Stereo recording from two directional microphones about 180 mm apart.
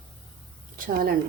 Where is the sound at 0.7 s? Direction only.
50° right (ahead or behind).